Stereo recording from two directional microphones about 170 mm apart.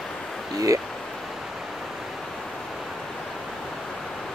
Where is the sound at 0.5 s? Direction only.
20° right (ahead or behind).